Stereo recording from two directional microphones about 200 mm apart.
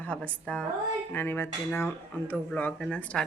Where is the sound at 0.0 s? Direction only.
5° left (ahead or behind).